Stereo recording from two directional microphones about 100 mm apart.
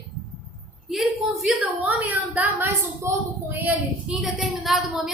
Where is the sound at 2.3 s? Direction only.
15° right (ahead or behind).